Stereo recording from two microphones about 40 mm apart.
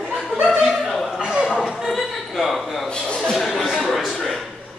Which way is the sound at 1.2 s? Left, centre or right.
Centre.